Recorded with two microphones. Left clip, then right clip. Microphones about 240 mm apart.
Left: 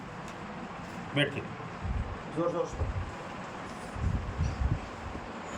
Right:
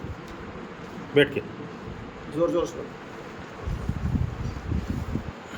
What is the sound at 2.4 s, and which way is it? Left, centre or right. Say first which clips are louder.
Speech: right 6 dB; right.